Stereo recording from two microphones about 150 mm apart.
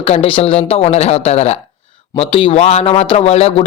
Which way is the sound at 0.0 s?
40° left (ahead or behind).